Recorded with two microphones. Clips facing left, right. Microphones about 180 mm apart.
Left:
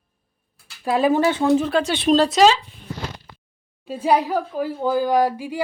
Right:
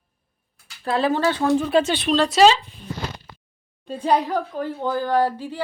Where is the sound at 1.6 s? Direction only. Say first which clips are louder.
Right 2 dB; centre (ahead or behind).